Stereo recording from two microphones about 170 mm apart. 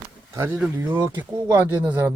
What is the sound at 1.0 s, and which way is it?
Speech, 25° right (ahead or behind).